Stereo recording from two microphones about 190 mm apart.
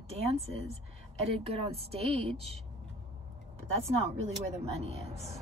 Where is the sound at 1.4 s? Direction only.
30° right (ahead or behind).